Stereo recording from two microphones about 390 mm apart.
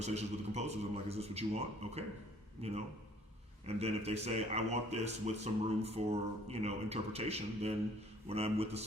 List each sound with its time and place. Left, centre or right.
0.0 s speech: centre